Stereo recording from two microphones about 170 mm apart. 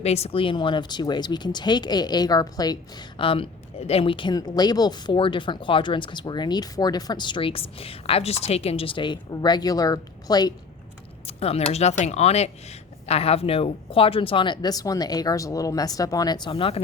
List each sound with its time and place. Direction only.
0.0 s a woman's voice: 35° left (ahead or behind)
11.3 s a woman's voice: 35° left (ahead or behind)